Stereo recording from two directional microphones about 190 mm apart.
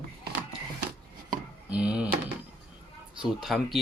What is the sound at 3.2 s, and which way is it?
Speech, centre (ahead or behind).